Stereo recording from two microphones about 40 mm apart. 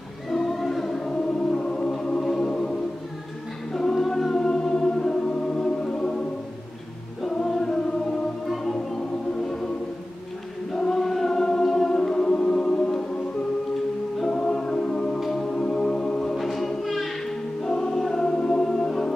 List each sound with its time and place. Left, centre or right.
0.3 s music: centre
3.7 s music: centre
7.3 s choir: centre
8.7 s music: centre
10.7 s choir: centre
14.2 s music: centre
16.2 s music: centre
17.2 s choir: centre
18.2 s music: centre